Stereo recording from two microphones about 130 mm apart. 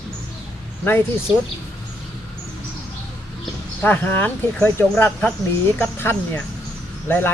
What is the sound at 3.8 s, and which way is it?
Speech, 15° left (ahead or behind).